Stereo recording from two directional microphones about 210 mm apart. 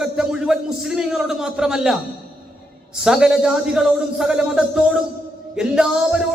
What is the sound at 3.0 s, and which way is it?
A man's voice, 5° right (ahead or behind).